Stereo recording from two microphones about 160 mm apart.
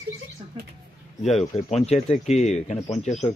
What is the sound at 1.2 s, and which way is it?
Speech, 40° left (ahead or behind).